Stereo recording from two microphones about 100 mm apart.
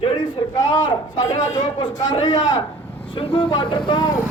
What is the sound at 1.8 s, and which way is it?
A man's voice, 55° left (ahead or behind).